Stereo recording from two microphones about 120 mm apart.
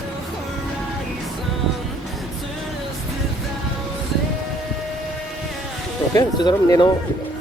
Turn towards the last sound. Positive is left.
turn(degrees=35)  # may be behind; listen again after turning